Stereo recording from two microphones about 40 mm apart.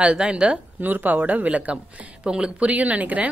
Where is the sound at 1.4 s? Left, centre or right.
Right.